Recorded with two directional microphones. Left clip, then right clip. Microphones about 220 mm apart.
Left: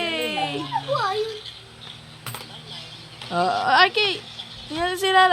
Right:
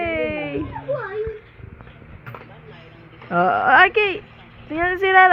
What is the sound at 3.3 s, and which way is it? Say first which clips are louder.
Speech: right 4 dB; centre (ahead or behind).